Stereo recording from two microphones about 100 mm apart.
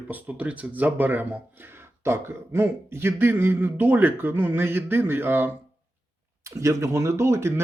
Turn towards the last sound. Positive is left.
turn(degrees=-25)  # may be behind; listen again after turning